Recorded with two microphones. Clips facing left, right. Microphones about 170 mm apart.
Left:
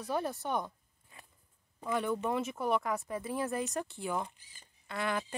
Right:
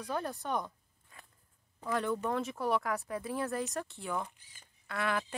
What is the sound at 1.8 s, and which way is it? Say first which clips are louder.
Speech: even; 5° left (ahead or behind).